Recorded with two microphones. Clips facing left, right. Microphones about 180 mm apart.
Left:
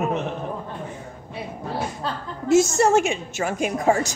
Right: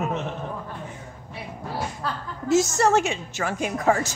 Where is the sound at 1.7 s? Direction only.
20° left (ahead or behind).